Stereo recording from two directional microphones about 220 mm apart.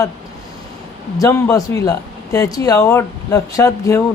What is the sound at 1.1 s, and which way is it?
Speech, 15° left (ahead or behind).